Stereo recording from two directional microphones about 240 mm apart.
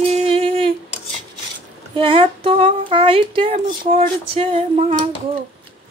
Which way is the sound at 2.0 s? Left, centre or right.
Right.